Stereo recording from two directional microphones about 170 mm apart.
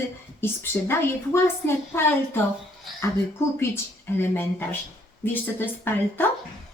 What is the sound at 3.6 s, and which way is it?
Speech, 15° left (ahead or behind).